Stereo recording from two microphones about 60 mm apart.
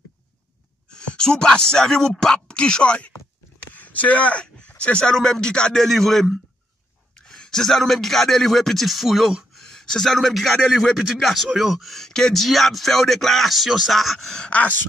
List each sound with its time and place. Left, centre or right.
0.9 s speech: centre
14.5 s speech: left